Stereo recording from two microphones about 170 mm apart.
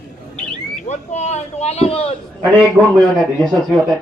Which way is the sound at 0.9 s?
40° left (ahead or behind).